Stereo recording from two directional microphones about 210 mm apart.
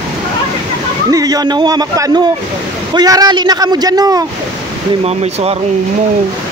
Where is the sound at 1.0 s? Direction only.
15° right (ahead or behind).